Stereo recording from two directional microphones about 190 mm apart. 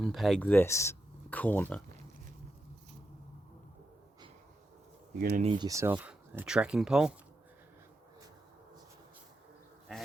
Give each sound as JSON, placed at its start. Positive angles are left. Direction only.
{"t": 0.0, "sound": "speech", "side_deg": 0}
{"t": 5.4, "sound": "speech", "side_deg": -30}
{"t": 5.6, "sound": "speech", "side_deg": -15}